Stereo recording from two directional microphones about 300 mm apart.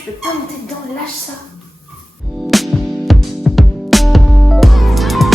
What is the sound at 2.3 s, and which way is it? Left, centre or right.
Music, centre.